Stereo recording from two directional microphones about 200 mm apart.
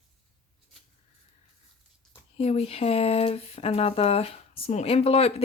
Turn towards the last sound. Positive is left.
turn(degrees=30)  # may be behind; listen again after turning